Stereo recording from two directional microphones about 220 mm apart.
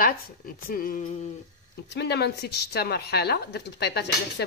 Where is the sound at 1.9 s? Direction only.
50° left (ahead or behind).